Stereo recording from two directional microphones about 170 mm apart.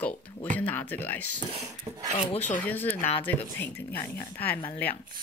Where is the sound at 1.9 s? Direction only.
20° right (ahead or behind).